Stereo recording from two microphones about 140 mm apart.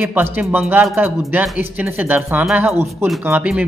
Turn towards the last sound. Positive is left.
turn(degrees=-10)  # may be behind; listen again after turning